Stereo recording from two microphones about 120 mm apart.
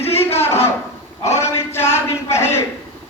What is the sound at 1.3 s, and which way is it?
Speech, 20° left (ahead or behind).